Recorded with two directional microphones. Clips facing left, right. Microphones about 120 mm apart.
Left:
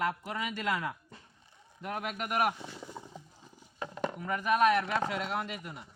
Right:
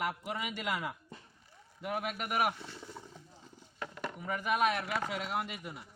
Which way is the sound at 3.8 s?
25° left (ahead or behind).